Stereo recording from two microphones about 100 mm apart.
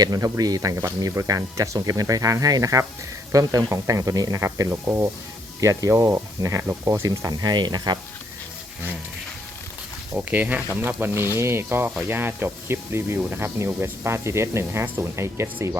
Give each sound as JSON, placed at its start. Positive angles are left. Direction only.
{"t": 0.0, "sound": "speech", "side_deg": -40}
{"t": 10.2, "sound": "speech", "side_deg": -15}